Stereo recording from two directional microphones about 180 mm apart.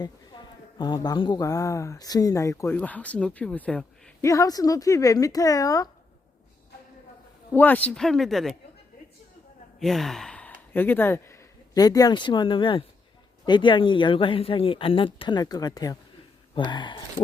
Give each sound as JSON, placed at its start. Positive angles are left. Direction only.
{"t": 0.0, "sound": "speech", "side_deg": 25}
{"t": 4.2, "sound": "speech", "side_deg": 15}
{"t": 7.5, "sound": "speech", "side_deg": 10}
{"t": 9.8, "sound": "speech", "side_deg": 0}